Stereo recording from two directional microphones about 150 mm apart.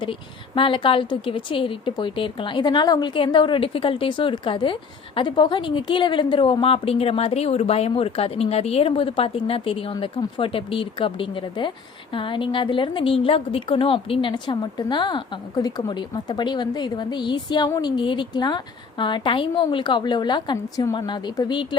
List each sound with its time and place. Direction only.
0.0 s a woman's voice: 35° left (ahead or behind)